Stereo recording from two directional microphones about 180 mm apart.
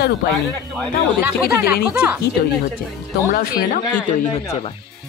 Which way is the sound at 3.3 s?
55° left (ahead or behind).